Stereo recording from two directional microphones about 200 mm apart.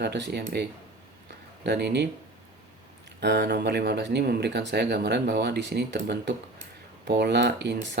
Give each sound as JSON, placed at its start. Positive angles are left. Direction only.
{"t": 0.0, "sound": "speech", "side_deg": -60}
{"t": 3.2, "sound": "speech", "side_deg": -60}